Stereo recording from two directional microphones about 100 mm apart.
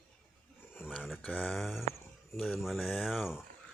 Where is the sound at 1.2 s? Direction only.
15° left (ahead or behind).